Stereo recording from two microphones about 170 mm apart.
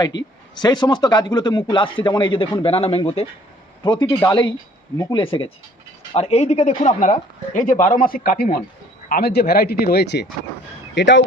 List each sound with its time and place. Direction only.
0.1 s speech: 25° left (ahead or behind); by 10.2 s 80° left
10.9 s speech: 90° left